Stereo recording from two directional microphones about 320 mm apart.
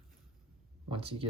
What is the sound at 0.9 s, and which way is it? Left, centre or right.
Speech, centre.